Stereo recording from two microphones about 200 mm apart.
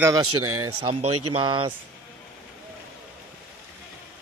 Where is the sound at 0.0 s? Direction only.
15° right (ahead or behind).